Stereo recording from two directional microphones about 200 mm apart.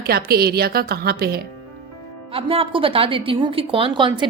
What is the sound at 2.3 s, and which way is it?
A woman's voice, 30° right (ahead or behind).